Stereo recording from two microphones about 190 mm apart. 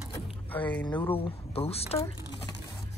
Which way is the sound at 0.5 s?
10° left (ahead or behind).